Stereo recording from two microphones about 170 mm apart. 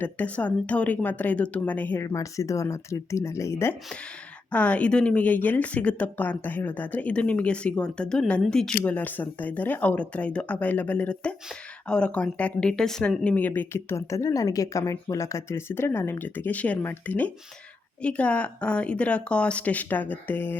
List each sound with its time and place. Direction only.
0.0 s speech: 10° left (ahead or behind)